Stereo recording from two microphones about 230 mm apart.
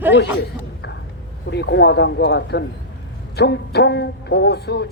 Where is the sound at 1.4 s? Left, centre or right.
Left.